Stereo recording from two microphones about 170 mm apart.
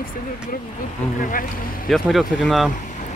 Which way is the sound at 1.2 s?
55° left (ahead or behind).